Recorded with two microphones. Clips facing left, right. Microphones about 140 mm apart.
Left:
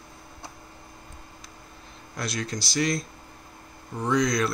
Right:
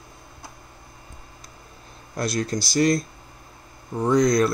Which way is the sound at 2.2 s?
40° right (ahead or behind).